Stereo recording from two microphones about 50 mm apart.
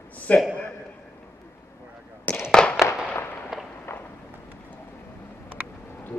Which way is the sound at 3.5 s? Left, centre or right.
Centre.